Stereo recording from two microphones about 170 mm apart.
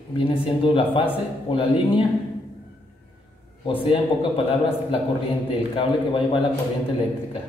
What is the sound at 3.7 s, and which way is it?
Speech, 30° left (ahead or behind).